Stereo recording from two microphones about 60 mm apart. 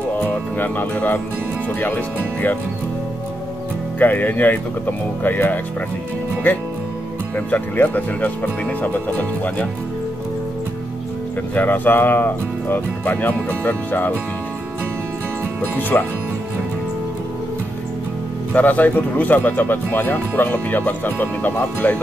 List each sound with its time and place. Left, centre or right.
0.2 s music: left
1.8 s speech: left
4.0 s speech: left
7.3 s speech: left
11.5 s speech: left
15.9 s speech: left
18.5 s speech: left